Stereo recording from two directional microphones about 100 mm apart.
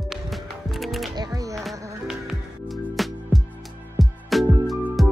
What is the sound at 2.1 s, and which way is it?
Music, 5° right (ahead or behind).